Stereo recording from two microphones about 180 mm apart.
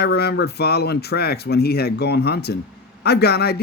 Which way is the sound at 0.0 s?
65° left (ahead or behind).